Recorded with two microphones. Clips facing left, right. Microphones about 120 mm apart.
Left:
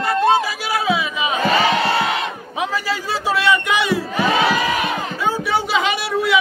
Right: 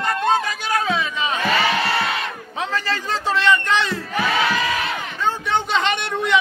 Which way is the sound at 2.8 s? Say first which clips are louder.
Left 2 dB; 10° left (ahead or behind).